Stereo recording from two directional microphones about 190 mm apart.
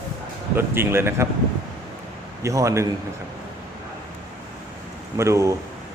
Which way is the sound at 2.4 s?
15° right (ahead or behind).